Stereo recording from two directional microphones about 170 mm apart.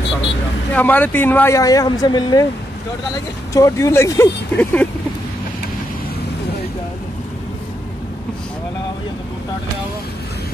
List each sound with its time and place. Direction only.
0.7 s speech: 10° left (ahead or behind)
3.5 s speech: 20° left (ahead or behind)